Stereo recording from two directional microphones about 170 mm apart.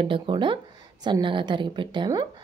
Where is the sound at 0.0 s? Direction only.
30° right (ahead or behind).